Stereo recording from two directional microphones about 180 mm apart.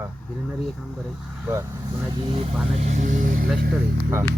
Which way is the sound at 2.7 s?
40° right (ahead or behind).